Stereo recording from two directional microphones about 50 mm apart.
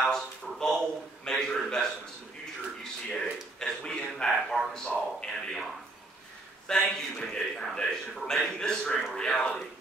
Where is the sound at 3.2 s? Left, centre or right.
Centre.